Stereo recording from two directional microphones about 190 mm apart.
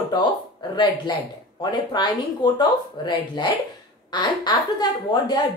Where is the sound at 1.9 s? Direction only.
25° left (ahead or behind).